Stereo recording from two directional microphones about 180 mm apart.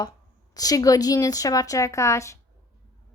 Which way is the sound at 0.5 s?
20° left (ahead or behind).